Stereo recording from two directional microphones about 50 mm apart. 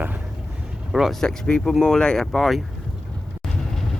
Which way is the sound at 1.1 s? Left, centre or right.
Centre.